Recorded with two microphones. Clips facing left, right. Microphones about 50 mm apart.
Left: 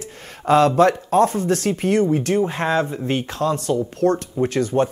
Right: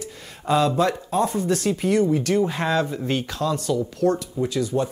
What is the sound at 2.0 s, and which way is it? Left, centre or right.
Speech, left.